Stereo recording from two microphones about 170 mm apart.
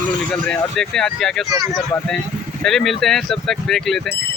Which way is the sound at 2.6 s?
Centre (ahead or behind).